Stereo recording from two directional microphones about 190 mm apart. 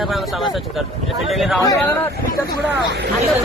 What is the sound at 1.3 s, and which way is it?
Speech, centre (ahead or behind).